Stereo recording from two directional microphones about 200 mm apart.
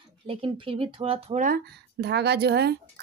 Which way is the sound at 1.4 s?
50° right (ahead or behind).